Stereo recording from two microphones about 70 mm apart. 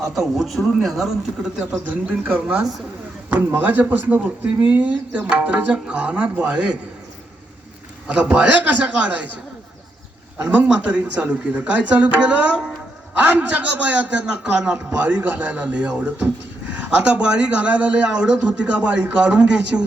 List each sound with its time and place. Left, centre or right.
0.3 s speech: centre
1.7 s a man's voice: right
8.0 s a man's voice: centre
10.4 s a man's voice: right